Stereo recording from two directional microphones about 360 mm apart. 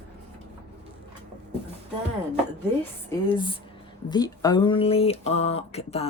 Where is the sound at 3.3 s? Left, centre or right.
Centre.